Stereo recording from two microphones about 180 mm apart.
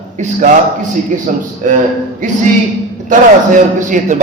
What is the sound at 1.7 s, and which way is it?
Speech, 50° right (ahead or behind).